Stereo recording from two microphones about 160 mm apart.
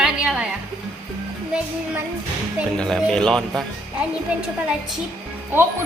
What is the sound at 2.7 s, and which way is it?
Speech, 5° left (ahead or behind).